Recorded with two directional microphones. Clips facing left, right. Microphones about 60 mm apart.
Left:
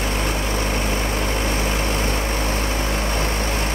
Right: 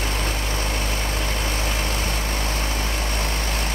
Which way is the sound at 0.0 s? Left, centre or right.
Centre.